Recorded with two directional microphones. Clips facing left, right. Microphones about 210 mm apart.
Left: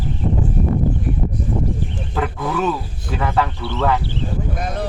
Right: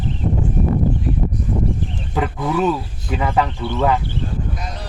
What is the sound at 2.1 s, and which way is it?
Speech, 15° right (ahead or behind).